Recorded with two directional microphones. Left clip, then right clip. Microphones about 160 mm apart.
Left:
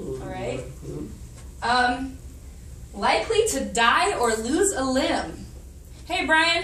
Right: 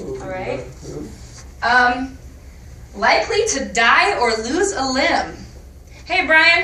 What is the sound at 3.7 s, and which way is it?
A woman's voice, 25° left (ahead or behind).